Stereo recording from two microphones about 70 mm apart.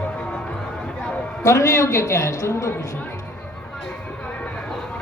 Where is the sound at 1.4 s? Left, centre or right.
Left.